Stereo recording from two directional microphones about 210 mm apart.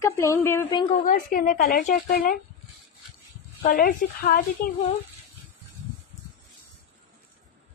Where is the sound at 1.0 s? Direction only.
40° left (ahead or behind).